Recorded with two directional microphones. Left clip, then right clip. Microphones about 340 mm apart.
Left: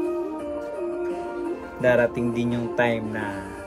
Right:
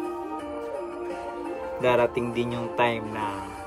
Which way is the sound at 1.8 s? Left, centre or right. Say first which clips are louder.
Left 2 dB; centre.